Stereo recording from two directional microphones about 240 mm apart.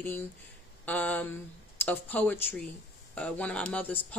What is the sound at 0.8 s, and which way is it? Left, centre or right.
Speech, centre.